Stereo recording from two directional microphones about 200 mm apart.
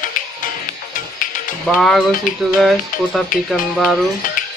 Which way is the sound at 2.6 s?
Centre (ahead or behind).